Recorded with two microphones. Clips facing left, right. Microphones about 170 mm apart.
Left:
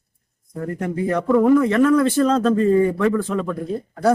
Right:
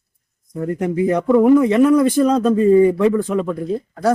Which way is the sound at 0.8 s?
20° right (ahead or behind).